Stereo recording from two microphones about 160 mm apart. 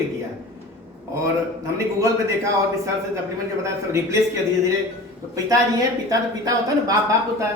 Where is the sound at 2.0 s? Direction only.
20° right (ahead or behind).